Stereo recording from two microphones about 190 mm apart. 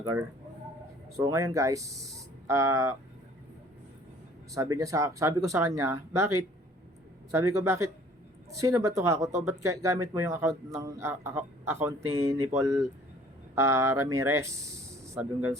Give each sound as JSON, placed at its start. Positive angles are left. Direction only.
{"t": 0.0, "sound": "speech", "side_deg": -15}
{"t": 4.5, "sound": "speech", "side_deg": -15}
{"t": 7.3, "sound": "speech", "side_deg": -15}
{"t": 13.6, "sound": "speech", "side_deg": -15}